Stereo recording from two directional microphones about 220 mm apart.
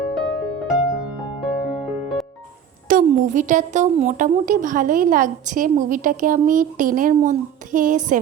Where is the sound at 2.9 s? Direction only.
35° right (ahead or behind).